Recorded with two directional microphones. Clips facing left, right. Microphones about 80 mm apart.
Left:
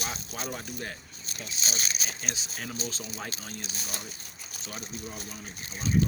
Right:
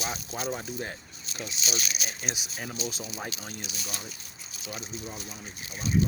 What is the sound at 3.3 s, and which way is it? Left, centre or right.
Speech, left.